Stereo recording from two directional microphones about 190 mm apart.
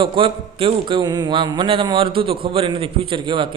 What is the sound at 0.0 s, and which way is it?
A man's voice, 30° right (ahead or behind).